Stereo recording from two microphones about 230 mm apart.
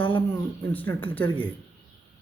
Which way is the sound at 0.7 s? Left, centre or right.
Centre.